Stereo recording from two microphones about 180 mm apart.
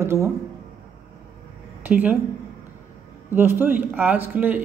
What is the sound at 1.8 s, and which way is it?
Speech, 10° right (ahead or behind).